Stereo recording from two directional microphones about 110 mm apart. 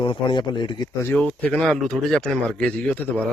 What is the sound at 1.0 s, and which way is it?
A man's voice, 15° left (ahead or behind).